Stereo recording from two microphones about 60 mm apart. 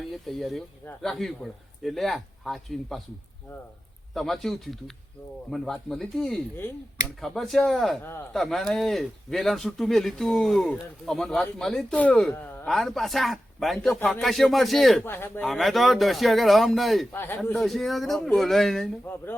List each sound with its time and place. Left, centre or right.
0.3 s speech: centre
4.1 s speech: centre
11.9 s speech: left
12.6 s speech: centre
15.0 s speech: left
15.4 s speech: centre
17.1 s speech: left
17.5 s speech: centre
19.0 s speech: left